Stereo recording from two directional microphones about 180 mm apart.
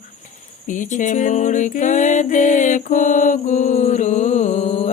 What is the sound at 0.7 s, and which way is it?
Music, 45° left (ahead or behind).